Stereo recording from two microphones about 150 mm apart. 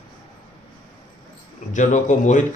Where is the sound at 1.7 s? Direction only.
55° left (ahead or behind).